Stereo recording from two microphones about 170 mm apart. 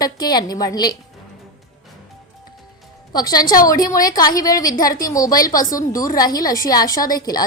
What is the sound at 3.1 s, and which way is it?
A woman's voice, 20° left (ahead or behind).